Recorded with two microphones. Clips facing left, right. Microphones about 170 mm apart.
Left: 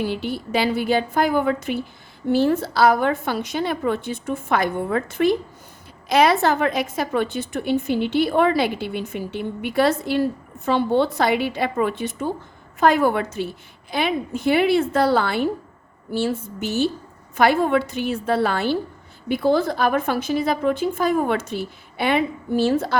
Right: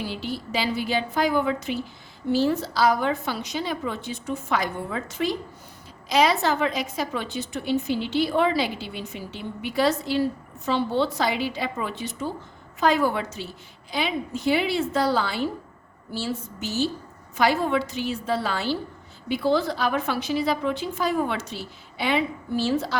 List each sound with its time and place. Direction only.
0.0 s a woman's voice: 55° left (ahead or behind)